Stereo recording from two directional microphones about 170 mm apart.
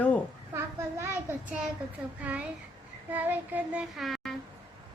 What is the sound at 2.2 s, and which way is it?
A child's voice, 10° right (ahead or behind).